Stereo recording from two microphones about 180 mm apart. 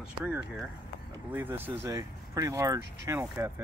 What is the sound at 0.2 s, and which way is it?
Speech, 5° right (ahead or behind).